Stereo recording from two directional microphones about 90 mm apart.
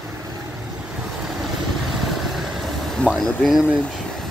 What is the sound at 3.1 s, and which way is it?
Speech, centre (ahead or behind).